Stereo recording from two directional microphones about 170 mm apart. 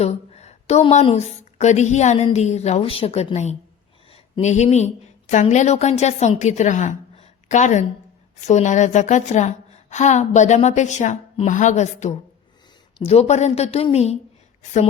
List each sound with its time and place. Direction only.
0.0 s a woman's voice: 40° left (ahead or behind)